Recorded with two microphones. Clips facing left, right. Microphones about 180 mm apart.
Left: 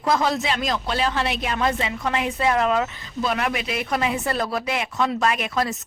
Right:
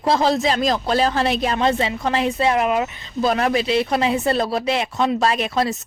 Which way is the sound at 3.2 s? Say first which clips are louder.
Right 6 dB; 35° right (ahead or behind).